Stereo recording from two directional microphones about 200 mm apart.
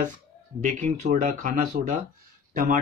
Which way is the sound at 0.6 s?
40° right (ahead or behind).